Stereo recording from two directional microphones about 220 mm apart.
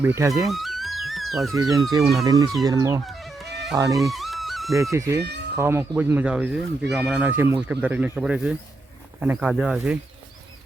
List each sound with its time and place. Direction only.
0.0 s speech: 10° right (ahead or behind)
0.4 s music: centre (ahead or behind)
1.5 s speech: 15° right (ahead or behind)
3.1 s music: centre (ahead or behind)
3.8 s speech: 15° right (ahead or behind)
4.1 s music: centre (ahead or behind)
4.8 s speech: 15° right (ahead or behind)